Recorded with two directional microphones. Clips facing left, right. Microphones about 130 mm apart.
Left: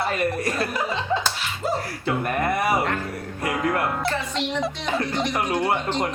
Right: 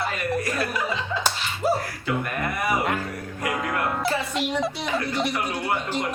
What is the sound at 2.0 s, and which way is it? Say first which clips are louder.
Speech: left 5 dB; 30° left (ahead or behind).